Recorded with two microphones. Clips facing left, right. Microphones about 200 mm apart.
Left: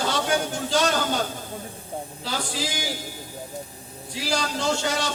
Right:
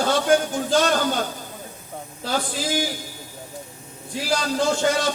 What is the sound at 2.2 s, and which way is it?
Speech, 50° right (ahead or behind).